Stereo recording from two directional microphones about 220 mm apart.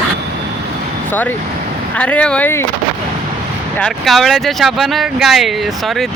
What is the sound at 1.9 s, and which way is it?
Speech, 5° left (ahead or behind).